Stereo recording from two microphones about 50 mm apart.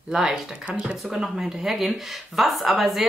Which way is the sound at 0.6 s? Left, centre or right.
Right.